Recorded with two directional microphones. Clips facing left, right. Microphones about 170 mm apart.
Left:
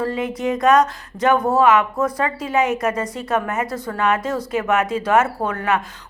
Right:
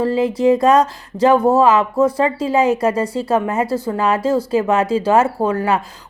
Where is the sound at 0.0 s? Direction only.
30° right (ahead or behind).